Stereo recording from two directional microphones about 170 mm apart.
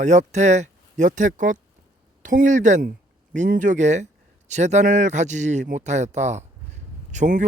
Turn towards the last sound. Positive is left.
turn(degrees=-45)  # may be behind; listen again after turning